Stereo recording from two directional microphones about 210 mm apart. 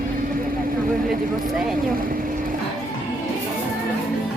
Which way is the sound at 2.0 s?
40° right (ahead or behind).